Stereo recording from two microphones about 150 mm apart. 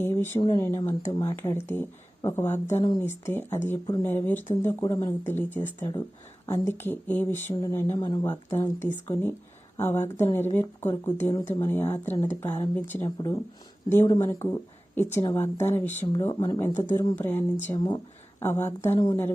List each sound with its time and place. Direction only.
0.0 s a sound: 15° left (ahead or behind)
0.3 s speech: 30° left (ahead or behind)
0.6 s speech: 20° left (ahead or behind)
5.2 s speech: 15° left (ahead or behind)
17.2 s speech: 15° left (ahead or behind)